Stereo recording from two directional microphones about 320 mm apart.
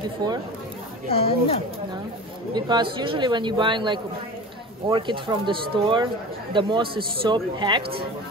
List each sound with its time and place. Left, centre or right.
1.0 s speech: centre
2.5 s speech: centre